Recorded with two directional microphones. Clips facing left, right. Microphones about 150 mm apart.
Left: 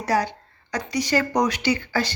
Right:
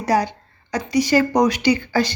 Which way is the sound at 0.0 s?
15° right (ahead or behind).